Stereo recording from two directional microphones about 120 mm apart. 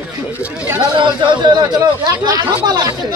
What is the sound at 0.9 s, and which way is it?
Speech, 40° right (ahead or behind).